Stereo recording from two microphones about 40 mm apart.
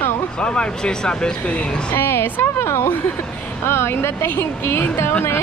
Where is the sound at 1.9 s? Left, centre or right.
Left.